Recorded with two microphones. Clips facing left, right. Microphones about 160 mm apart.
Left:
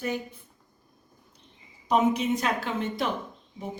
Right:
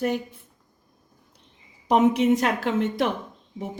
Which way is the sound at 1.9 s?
90° right.